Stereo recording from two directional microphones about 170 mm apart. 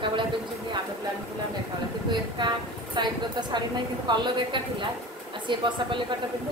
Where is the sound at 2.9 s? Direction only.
25° right (ahead or behind).